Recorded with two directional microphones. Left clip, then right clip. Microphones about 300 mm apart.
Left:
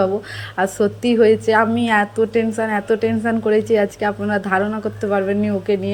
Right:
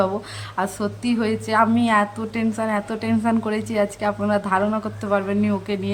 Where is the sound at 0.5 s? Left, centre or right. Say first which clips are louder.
Left 7 dB; centre.